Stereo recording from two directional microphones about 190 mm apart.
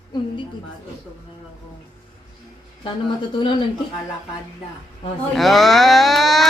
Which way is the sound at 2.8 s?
25° left (ahead or behind).